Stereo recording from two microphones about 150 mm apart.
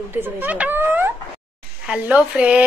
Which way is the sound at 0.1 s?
15° right (ahead or behind).